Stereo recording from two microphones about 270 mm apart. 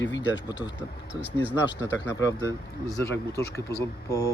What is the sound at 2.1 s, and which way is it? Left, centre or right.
Speech, centre.